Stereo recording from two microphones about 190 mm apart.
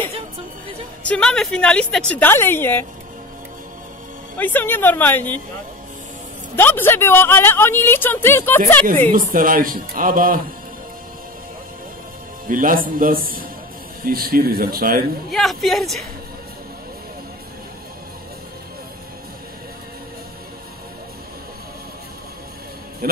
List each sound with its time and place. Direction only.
1.0 s a woman's voice: 5° left (ahead or behind)
4.4 s a woman's voice: 10° left (ahead or behind)
6.5 s a woman's voice: 10° left (ahead or behind)
9.1 s speech: 45° right (ahead or behind)
12.4 s speech: 45° right (ahead or behind)
15.3 s speech: centre (ahead or behind)